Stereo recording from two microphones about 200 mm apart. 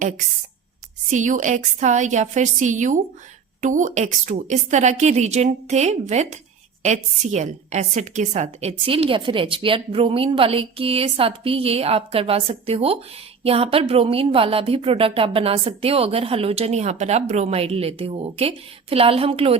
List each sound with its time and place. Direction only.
1.1 s a woman's voice: 40° right (ahead or behind)